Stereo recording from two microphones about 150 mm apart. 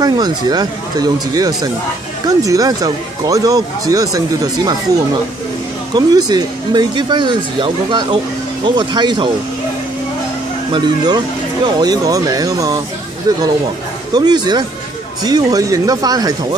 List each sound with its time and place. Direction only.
0.0 s speech: 25° right (ahead or behind)
5.9 s speech: 25° right (ahead or behind)
10.7 s speech: 30° right (ahead or behind)
14.1 s speech: 30° right (ahead or behind)